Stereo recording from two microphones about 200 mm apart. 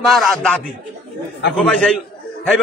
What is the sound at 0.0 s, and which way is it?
Speech, centre (ahead or behind).